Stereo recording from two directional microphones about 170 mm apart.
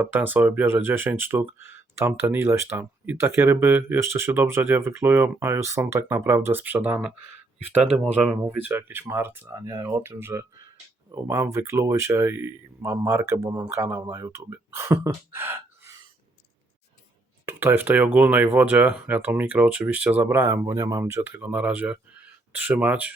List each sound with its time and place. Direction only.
0.0 s speech: 10° right (ahead or behind)
17.4 s speech: 15° right (ahead or behind)